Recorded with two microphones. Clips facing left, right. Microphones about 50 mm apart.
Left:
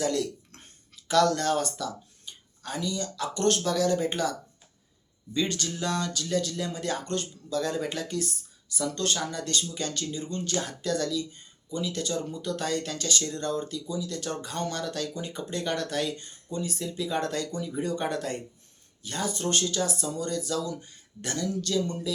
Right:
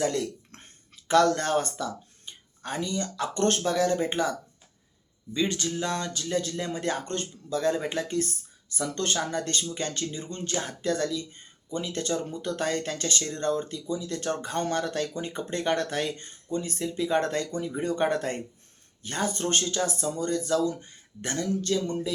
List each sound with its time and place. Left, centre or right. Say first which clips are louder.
0.0 s speech: even; right